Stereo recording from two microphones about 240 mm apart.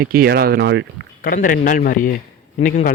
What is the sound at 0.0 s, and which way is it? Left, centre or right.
Speech, right.